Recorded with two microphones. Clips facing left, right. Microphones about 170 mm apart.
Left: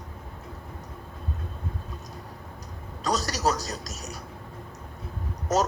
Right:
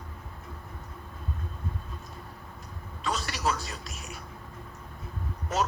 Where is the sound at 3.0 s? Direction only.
40° left (ahead or behind).